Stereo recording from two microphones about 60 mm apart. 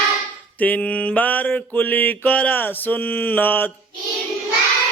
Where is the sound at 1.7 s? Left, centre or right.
Left.